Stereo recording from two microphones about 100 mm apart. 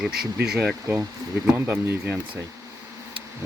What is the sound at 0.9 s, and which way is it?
Speech, 25° right (ahead or behind).